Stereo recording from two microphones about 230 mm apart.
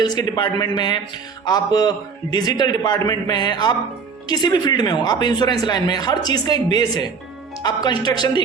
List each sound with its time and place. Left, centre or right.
0.0 s speech: centre